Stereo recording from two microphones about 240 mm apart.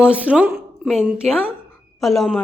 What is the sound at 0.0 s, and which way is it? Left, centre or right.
A woman's voice, centre.